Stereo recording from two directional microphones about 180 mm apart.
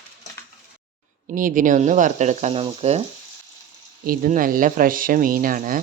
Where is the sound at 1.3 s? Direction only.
50° right (ahead or behind).